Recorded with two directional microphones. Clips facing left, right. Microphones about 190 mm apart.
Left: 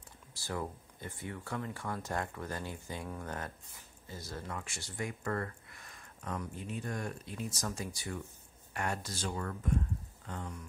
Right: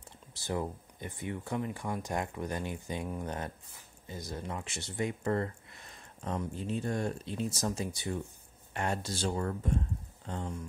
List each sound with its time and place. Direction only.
0.3 s speech: 20° right (ahead or behind)